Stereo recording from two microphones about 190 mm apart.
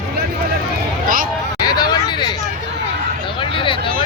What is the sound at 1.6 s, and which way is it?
Vehicle, 20° left (ahead or behind).